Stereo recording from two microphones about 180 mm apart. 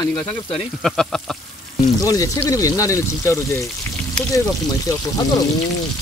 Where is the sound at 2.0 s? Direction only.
20° left (ahead or behind).